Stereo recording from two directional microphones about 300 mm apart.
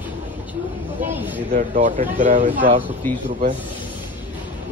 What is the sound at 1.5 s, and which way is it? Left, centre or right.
Speech, right.